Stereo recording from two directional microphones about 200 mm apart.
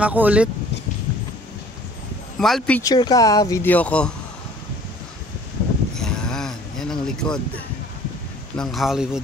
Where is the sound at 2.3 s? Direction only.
Centre (ahead or behind).